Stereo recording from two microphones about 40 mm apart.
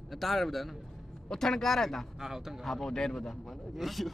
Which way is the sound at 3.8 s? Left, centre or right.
Centre.